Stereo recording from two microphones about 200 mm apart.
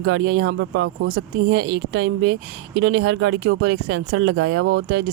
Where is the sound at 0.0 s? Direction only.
60° right (ahead or behind).